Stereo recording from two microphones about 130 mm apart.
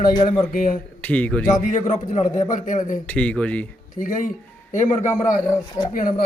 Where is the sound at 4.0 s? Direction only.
90° left.